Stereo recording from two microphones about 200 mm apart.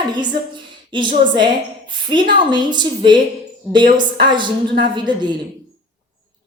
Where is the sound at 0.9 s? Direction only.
25° right (ahead or behind).